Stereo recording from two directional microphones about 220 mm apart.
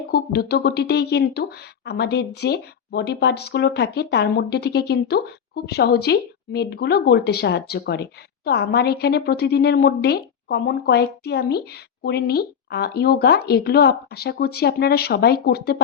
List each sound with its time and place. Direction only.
0.1 s a woman's voice: 45° left (ahead or behind)